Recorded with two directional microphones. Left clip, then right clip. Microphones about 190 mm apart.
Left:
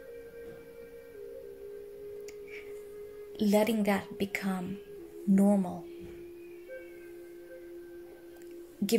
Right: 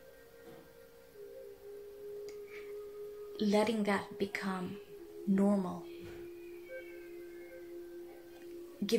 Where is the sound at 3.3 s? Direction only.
45° left (ahead or behind).